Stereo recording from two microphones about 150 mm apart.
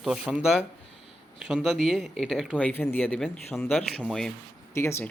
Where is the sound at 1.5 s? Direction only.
Centre (ahead or behind).